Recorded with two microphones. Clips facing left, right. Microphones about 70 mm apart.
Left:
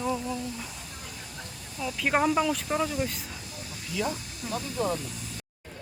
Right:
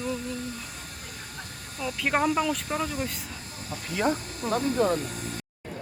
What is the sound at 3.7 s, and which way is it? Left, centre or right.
Speech, right.